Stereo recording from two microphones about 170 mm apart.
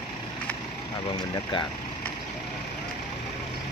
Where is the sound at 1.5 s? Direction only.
30° left (ahead or behind).